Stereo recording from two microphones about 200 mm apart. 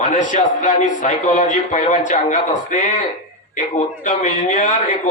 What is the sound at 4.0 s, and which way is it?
A man's voice, 35° left (ahead or behind).